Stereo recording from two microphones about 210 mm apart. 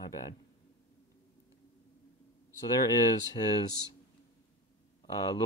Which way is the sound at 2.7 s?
15° left (ahead or behind).